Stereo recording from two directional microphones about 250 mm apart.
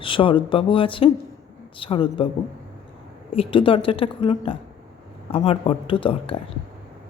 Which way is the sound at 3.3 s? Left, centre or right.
Left.